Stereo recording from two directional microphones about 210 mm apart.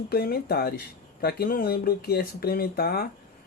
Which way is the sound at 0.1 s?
50° left (ahead or behind).